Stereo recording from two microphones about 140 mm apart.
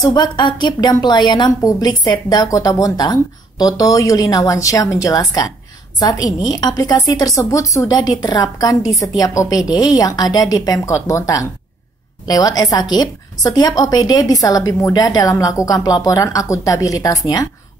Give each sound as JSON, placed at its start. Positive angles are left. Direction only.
{"t": 0.0, "sound": "a woman's voice", "side_deg": 30}